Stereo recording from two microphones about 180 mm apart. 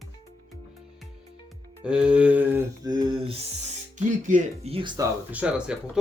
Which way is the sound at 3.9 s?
45° right (ahead or behind).